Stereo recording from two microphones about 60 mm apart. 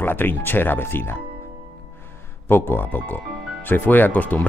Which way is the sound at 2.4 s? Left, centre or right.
Left.